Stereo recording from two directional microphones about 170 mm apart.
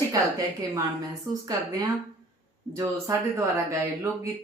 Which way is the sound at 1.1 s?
20° right (ahead or behind).